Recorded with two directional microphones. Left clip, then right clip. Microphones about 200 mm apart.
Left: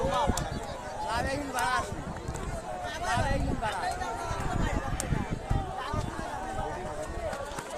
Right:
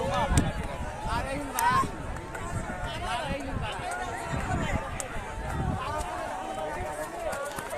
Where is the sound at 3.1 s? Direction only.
50° left (ahead or behind).